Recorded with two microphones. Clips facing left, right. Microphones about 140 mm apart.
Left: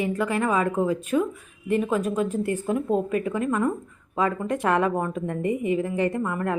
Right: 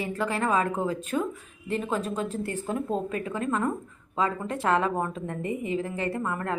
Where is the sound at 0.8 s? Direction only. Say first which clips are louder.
Left 5 dB; 10° left (ahead or behind).